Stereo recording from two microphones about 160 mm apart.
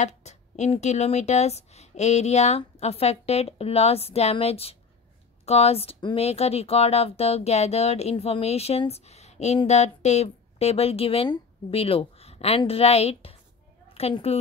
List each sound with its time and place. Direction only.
0.0 s a woman's voice: 45° left (ahead or behind)